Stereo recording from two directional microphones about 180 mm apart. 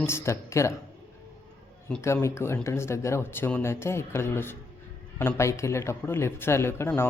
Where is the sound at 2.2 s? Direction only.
15° left (ahead or behind).